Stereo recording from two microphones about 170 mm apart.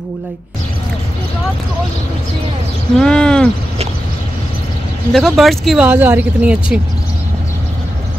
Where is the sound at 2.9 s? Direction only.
5° left (ahead or behind).